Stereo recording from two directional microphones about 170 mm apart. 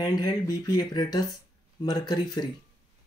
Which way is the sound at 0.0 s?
25° left (ahead or behind).